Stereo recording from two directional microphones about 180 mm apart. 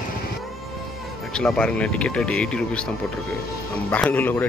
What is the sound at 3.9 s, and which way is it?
Speech, 10° left (ahead or behind).